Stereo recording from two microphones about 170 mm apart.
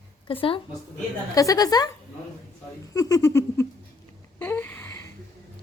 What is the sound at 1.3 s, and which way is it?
Speech, 20° left (ahead or behind).